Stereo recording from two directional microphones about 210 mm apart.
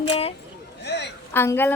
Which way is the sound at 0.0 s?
30° left (ahead or behind).